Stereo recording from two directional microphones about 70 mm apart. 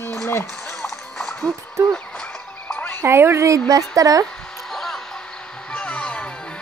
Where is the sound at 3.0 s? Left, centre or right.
Right.